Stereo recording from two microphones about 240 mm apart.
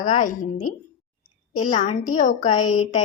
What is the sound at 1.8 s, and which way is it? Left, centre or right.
A woman's voice, left.